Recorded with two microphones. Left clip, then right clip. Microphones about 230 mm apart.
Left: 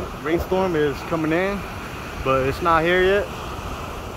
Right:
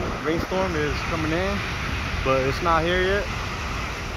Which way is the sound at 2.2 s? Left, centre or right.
Centre.